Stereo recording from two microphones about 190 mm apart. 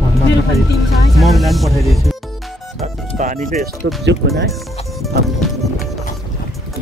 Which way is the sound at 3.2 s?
45° right (ahead or behind).